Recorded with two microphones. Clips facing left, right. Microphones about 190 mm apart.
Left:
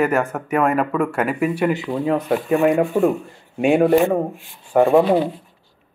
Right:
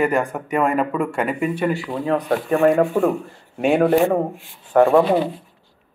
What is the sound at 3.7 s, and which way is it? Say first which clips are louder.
Speech: left 1 dB; centre (ahead or behind).